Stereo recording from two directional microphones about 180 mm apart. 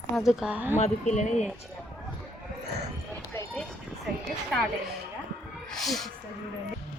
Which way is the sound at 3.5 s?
5° left (ahead or behind).